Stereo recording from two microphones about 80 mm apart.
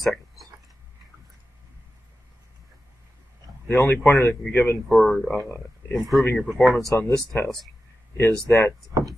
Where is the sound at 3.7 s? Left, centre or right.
Left.